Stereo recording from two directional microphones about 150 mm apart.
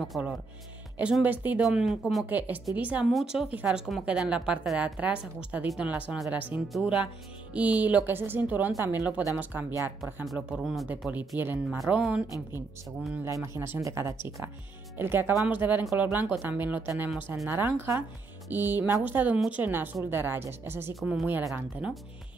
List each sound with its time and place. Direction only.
0.0 s speech: 5° right (ahead or behind)
10.2 s speech: centre (ahead or behind)
13.2 s speech: 20° right (ahead or behind)
20.9 s speech: centre (ahead or behind)